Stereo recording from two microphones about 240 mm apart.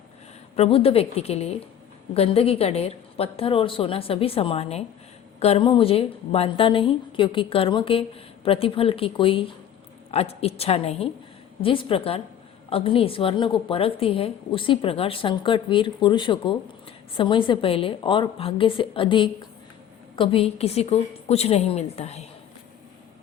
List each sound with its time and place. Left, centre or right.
0.5 s a woman's voice: left